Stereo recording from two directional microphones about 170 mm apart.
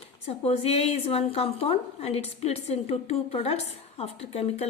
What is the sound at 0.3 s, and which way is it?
A woman's voice, 35° left (ahead or behind).